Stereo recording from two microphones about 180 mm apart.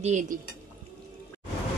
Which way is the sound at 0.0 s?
40° right (ahead or behind).